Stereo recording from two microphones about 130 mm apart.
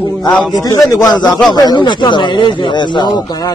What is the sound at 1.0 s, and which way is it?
Speech, 5° left (ahead or behind).